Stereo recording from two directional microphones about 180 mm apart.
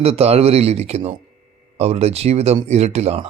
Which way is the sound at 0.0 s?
35° right (ahead or behind).